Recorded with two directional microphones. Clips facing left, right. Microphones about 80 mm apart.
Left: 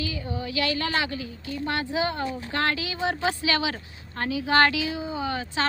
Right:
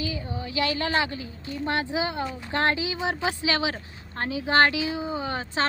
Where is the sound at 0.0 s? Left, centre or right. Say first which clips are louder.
Left 1 dB; right.